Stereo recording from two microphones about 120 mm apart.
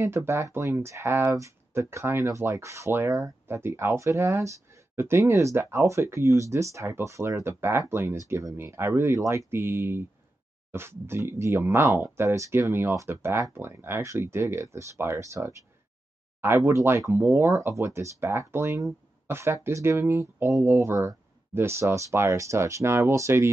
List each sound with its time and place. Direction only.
0.0 s speech: 20° right (ahead or behind)